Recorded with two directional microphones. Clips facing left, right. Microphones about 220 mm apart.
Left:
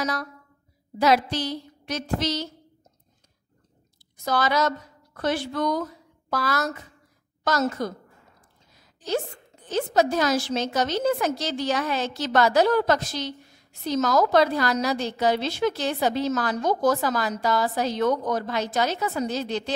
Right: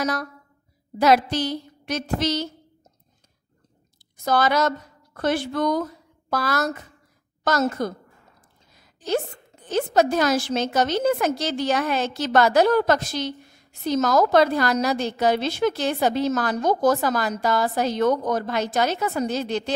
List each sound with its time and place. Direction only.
0.0 s a woman's voice: 50° right (ahead or behind)
4.2 s a woman's voice: 50° right (ahead or behind)
9.7 s a woman's voice: 55° right (ahead or behind)